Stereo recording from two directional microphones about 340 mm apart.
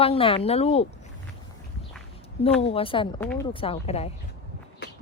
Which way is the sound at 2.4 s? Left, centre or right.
Centre.